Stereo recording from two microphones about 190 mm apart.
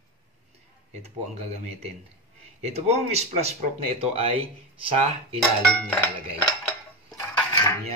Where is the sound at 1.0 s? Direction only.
35° right (ahead or behind).